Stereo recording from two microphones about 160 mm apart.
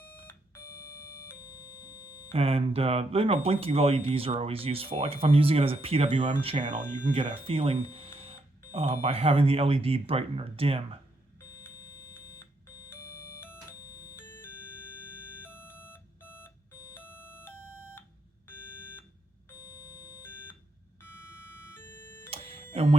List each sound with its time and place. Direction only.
1.4 s music: 25° left (ahead or behind)
2.3 s speech: 35° right (ahead or behind)
11.3 s beep: 20° left (ahead or behind)
14.0 s music: 20° left (ahead or behind)
15.4 s alarm clock: 15° left (ahead or behind)
19.5 s a sound: 25° left (ahead or behind)
22.3 s music: 35° right (ahead or behind)